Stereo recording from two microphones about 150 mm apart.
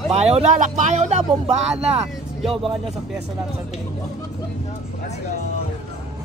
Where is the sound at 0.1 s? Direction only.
45° right (ahead or behind).